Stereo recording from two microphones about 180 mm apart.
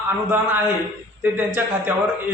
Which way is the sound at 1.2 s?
10° right (ahead or behind).